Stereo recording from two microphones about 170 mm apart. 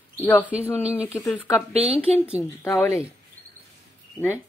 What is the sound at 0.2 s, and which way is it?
Speech, 10° left (ahead or behind).